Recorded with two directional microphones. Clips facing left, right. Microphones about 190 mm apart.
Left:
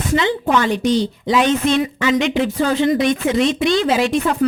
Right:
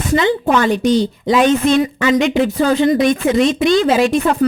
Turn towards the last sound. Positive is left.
turn(degrees=-45)  # may be behind; listen again after turning